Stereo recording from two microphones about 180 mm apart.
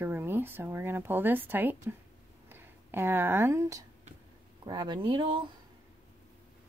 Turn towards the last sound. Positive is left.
turn(degrees=-25)  # may be behind; listen again after turning